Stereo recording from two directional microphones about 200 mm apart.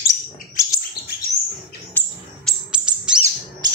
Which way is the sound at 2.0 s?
Centre (ahead or behind).